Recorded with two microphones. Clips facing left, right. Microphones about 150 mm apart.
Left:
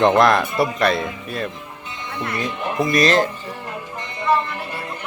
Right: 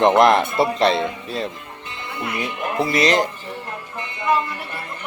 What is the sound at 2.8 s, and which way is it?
Speech, 25° right (ahead or behind).